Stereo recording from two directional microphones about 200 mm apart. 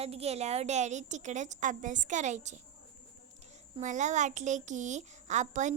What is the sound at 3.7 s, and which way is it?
Speech, 35° right (ahead or behind).